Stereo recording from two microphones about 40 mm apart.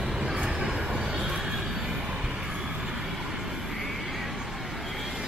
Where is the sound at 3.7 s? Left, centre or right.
Centre.